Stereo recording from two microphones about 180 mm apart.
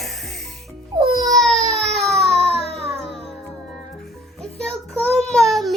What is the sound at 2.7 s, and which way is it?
Music, 35° right (ahead or behind).